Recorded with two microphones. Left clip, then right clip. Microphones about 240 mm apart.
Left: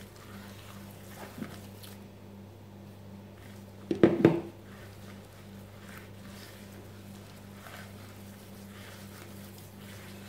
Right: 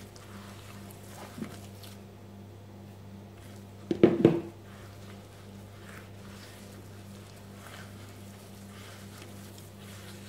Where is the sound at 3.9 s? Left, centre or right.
Centre.